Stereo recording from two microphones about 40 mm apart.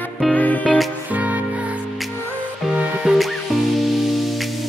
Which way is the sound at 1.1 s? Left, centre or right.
Right.